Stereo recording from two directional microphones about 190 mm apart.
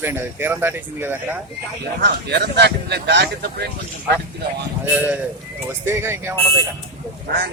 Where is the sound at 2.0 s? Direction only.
60° right (ahead or behind).